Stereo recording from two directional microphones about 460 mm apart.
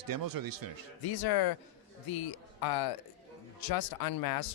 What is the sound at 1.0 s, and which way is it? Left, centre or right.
Speech, left.